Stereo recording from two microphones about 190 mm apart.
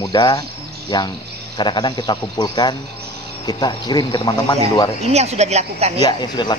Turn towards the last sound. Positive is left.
turn(degrees=25)  # may be behind; listen again after turning